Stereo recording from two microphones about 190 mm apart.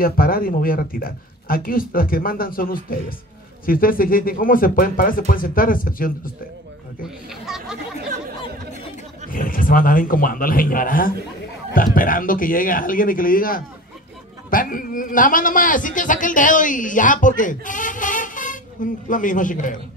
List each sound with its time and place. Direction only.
0.0 s a man's voice: 50° left (ahead or behind)
7.2 s speech: centre (ahead or behind)
9.3 s a man's voice: 45° left (ahead or behind)